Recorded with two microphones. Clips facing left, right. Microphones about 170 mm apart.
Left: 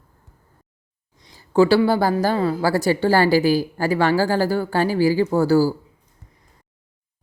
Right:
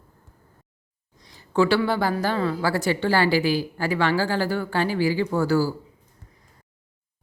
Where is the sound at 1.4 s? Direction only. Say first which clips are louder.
Left 5 dB; 35° left (ahead or behind).